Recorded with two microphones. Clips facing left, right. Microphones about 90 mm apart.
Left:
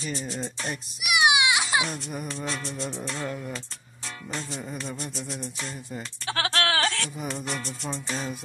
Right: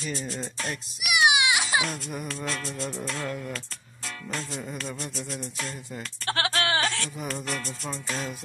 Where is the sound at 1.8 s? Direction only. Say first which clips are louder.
Left 1 dB; 5° left (ahead or behind).